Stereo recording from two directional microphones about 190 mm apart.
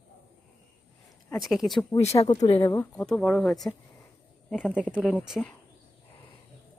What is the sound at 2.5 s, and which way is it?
Speech, 25° left (ahead or behind).